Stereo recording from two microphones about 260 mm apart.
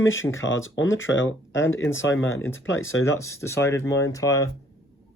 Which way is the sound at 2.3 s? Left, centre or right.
Centre.